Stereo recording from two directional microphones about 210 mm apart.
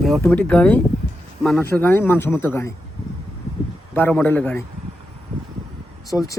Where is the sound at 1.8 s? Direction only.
10° left (ahead or behind).